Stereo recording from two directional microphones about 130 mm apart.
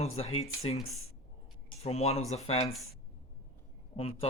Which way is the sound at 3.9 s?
50° left (ahead or behind).